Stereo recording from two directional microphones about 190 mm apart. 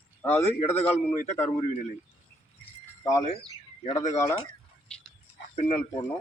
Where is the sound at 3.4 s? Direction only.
35° left (ahead or behind).